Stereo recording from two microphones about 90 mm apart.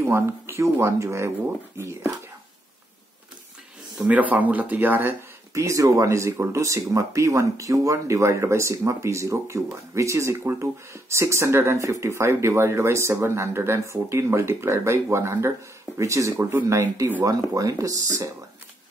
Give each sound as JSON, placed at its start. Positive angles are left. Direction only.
{"t": 0.0, "sound": "speech", "side_deg": -30}
{"t": 4.1, "sound": "speech", "side_deg": -15}
{"t": 5.5, "sound": "speech", "side_deg": -35}